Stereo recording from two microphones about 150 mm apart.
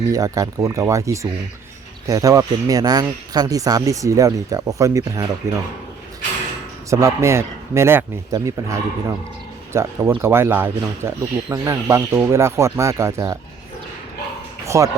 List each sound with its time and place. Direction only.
0.1 s speech: 20° right (ahead or behind)
6.9 s speech: 20° right (ahead or behind)
9.7 s speech: 20° right (ahead or behind)
14.7 s speech: 20° right (ahead or behind)